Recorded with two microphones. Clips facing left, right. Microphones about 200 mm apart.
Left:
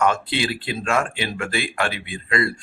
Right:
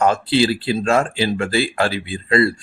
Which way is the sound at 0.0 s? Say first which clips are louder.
Right 5 dB; 30° right (ahead or behind).